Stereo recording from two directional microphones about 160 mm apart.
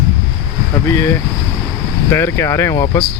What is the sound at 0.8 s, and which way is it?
Speech, 15° left (ahead or behind).